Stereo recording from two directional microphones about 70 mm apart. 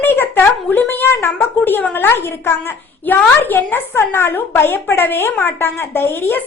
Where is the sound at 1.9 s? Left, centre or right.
Left.